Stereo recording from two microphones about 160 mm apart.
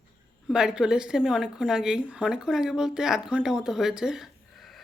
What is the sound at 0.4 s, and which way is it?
A woman's voice, 5° right (ahead or behind).